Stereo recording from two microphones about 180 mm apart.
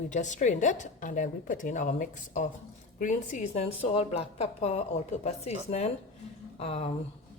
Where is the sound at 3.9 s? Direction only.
35° left (ahead or behind).